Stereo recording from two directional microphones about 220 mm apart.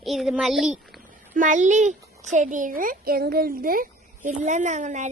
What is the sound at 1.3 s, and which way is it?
A child's voice, 35° right (ahead or behind).